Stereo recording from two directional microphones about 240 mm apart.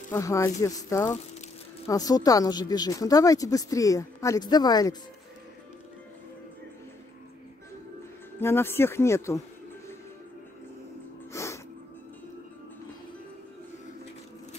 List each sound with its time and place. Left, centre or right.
0.1 s speech: centre
8.4 s speech: centre
11.3 s music: centre